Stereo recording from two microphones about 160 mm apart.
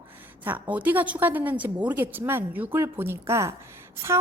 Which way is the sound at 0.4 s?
10° right (ahead or behind).